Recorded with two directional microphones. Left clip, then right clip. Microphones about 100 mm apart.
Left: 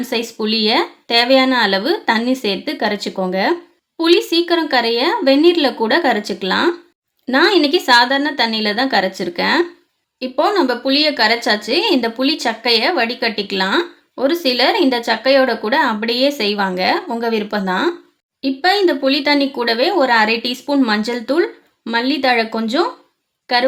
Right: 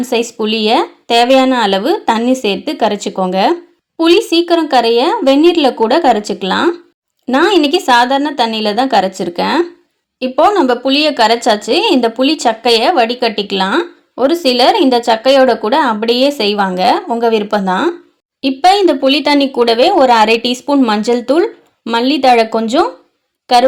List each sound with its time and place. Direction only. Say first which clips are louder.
0.0 s speech: right 6 dB; 35° right (ahead or behind)
10.2 s speech: right 6 dB; 40° right (ahead or behind)
18.4 s speech: right 6 dB; 55° right (ahead or behind)